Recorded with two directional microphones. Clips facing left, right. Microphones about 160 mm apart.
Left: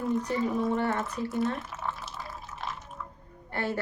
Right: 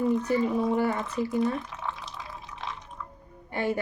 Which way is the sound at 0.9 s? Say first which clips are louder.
Right 3 dB; centre (ahead or behind).